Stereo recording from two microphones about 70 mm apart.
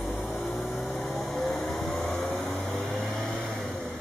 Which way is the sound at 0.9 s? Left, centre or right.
Centre.